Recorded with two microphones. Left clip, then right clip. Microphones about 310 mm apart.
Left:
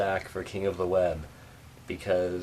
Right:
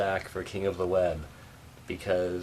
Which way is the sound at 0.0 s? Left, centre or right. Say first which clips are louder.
Left 1 dB; centre.